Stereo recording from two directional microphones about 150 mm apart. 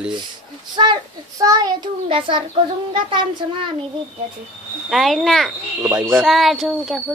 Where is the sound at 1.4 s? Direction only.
25° right (ahead or behind).